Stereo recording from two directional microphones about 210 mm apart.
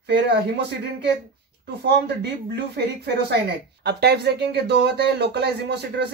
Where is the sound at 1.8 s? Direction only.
55° right (ahead or behind).